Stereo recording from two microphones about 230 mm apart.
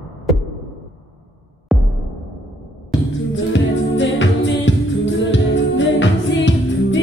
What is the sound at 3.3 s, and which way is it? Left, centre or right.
Music, left.